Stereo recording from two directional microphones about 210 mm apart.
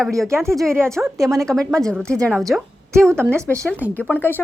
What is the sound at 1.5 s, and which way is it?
A woman's voice, 5° left (ahead or behind).